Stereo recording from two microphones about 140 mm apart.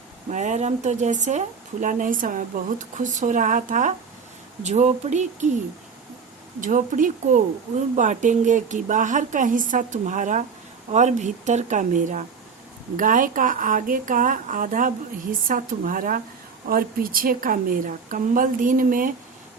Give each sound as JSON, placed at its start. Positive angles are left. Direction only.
{"t": 0.3, "sound": "speech", "side_deg": -60}
{"t": 4.6, "sound": "speech", "side_deg": -55}
{"t": 6.6, "sound": "a woman's voice", "side_deg": -70}